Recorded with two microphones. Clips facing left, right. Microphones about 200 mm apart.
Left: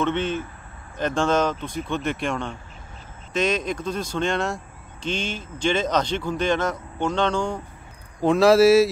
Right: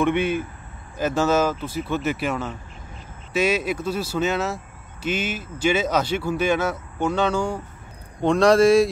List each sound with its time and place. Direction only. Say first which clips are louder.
0.0 s speech: right 3 dB; 10° right (ahead or behind)
8.2 s speech: left 1 dB; 5° left (ahead or behind)